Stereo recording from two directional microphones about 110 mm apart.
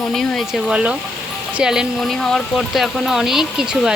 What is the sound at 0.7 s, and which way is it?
Speech, 10° right (ahead or behind).